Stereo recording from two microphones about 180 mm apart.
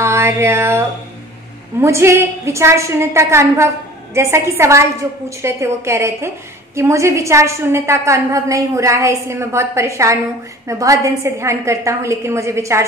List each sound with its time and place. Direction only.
0.0 s music: 15° right (ahead or behind)
1.8 s a woman's voice: 15° right (ahead or behind)